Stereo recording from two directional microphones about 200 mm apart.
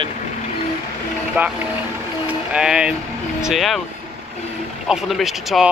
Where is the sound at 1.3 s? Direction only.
5° right (ahead or behind).